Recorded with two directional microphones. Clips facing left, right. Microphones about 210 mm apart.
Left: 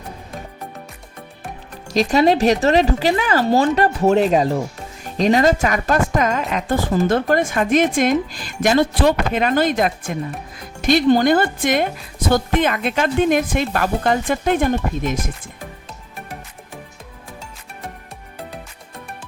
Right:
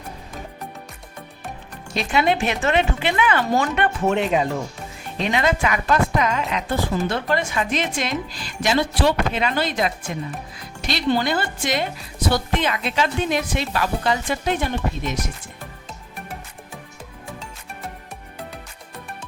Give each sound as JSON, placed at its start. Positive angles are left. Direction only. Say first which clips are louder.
{"t": 1.9, "sound": "speech", "louder": "left 6 dB", "side_deg": 40}